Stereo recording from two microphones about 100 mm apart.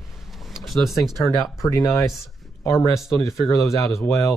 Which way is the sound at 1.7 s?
35° left (ahead or behind).